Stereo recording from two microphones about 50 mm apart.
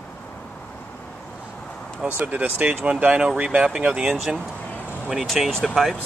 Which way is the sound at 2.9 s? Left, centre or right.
Right.